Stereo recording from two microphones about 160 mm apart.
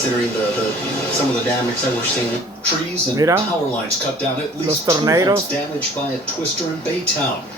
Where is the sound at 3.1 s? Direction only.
20° right (ahead or behind).